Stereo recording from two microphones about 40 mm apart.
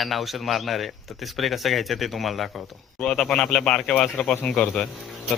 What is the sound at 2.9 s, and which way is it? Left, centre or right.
Speech, centre.